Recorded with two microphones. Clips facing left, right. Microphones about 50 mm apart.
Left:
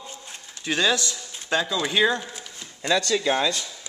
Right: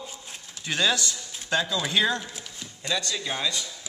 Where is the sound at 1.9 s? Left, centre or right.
Centre.